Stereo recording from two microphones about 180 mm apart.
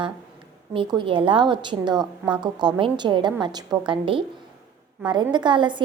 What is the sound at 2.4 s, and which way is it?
A woman's voice, 25° right (ahead or behind).